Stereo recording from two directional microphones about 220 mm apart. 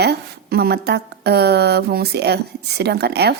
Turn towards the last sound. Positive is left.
turn(degrees=-45)  # may be behind; listen again after turning